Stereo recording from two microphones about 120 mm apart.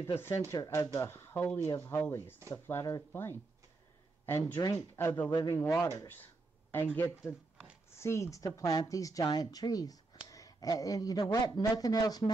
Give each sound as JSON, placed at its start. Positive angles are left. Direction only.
{"t": 0.5, "sound": "a man's voice", "side_deg": 25}